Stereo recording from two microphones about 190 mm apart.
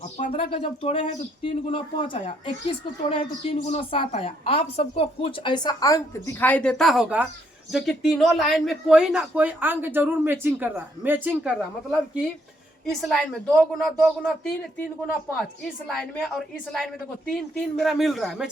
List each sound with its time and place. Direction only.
0.3 s a woman's voice: 30° left (ahead or behind); by 14.5 s centre (ahead or behind)
15.9 s speech: centre (ahead or behind)